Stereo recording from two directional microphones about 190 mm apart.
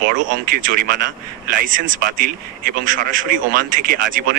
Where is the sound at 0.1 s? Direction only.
45° right (ahead or behind).